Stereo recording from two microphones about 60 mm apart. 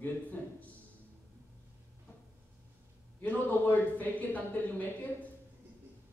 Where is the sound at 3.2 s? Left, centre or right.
Left.